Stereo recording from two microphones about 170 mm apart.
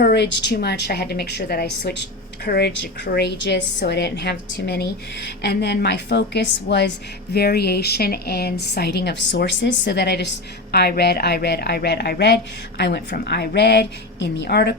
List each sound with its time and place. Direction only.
0.0 s a woman's voice: 80° left
7.3 s a woman's voice: 70° left (ahead or behind)